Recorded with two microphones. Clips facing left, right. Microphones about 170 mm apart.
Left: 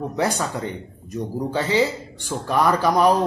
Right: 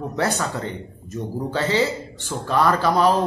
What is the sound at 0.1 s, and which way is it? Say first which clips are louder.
A man's voice: right 1 dB; 15° left (ahead or behind).